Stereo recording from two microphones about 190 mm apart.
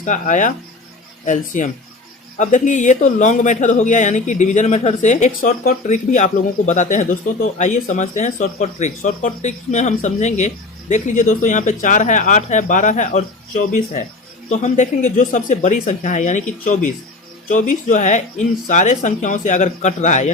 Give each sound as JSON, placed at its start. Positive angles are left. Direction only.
{"t": 0.0, "sound": "speech", "side_deg": 40}
{"t": 14.5, "sound": "speech", "side_deg": 40}